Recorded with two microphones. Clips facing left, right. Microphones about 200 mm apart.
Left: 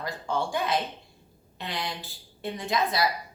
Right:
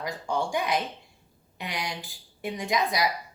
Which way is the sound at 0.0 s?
15° right (ahead or behind).